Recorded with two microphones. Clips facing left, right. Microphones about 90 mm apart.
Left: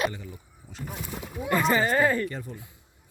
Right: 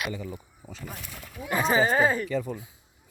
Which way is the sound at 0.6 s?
45° right (ahead or behind).